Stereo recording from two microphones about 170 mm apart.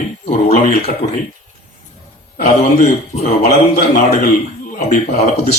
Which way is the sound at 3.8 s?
60° left (ahead or behind).